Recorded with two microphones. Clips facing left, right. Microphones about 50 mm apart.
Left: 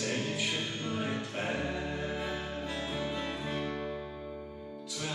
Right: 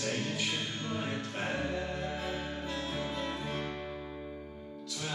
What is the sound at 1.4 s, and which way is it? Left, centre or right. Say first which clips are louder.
Music: right 1 dB; centre.